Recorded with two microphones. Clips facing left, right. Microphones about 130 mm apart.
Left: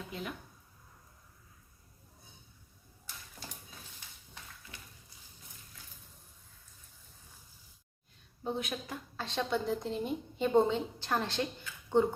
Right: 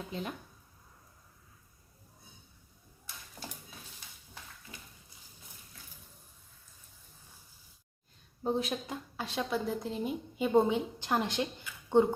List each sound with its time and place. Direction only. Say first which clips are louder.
0.1 s a woman's voice: right 2 dB; 30° right (ahead or behind)
4.7 s a sound: right 3 dB; 20° right (ahead or behind)
8.4 s speech: right 5 dB; 35° right (ahead or behind)
8.9 s a woman's voice: right 2 dB; 10° right (ahead or behind)